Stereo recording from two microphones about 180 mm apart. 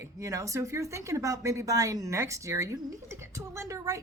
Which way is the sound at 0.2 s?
15° right (ahead or behind).